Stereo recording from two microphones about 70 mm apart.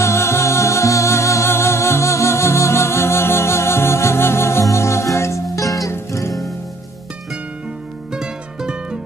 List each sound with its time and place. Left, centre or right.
0.0 s music: left
8.1 s music: centre